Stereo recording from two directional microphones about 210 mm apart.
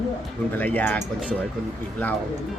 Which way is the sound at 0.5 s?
10° left (ahead or behind).